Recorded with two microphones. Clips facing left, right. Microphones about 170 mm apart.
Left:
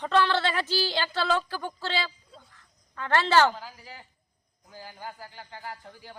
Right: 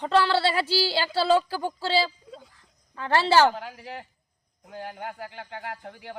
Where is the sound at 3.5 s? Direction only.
65° right (ahead or behind).